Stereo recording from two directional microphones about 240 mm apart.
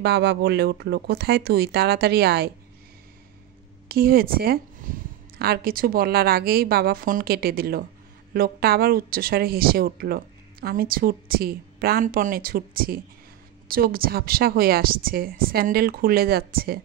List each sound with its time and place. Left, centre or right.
0.0 s speech: right
3.9 s speech: right